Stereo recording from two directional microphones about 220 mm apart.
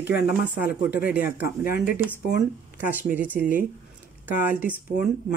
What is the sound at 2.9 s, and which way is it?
Speech, 10° right (ahead or behind).